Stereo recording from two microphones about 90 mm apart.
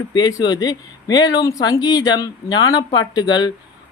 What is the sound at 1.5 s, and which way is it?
Speech, 40° left (ahead or behind).